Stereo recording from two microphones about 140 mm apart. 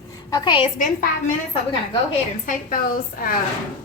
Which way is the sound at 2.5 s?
80° left.